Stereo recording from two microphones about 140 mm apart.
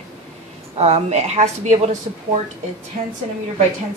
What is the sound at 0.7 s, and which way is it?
A woman's voice, 50° right (ahead or behind).